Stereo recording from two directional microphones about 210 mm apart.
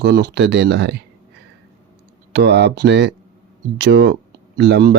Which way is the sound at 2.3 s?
55° right (ahead or behind).